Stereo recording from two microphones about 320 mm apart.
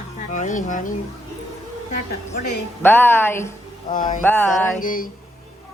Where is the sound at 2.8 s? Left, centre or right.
Centre.